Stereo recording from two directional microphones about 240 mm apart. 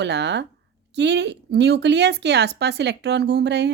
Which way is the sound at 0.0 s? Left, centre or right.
Right.